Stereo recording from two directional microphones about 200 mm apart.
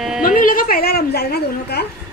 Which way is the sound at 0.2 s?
45° left (ahead or behind).